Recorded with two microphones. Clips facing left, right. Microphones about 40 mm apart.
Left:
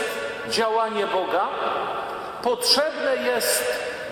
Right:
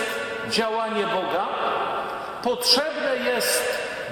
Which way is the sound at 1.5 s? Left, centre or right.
Centre.